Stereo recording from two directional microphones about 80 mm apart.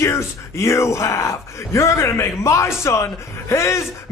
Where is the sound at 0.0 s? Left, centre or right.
Left.